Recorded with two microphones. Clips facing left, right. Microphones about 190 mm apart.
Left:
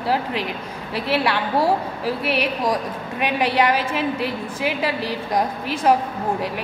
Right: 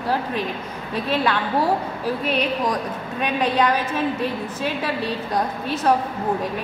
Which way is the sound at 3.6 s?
10° left (ahead or behind).